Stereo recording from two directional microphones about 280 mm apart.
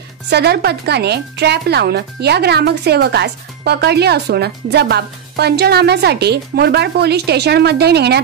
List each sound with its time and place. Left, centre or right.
0.3 s speech: right